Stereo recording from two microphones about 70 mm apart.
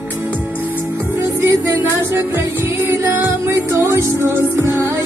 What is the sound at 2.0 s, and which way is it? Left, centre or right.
Music, right.